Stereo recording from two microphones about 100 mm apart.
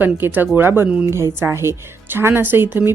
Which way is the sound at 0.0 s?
20° right (ahead or behind).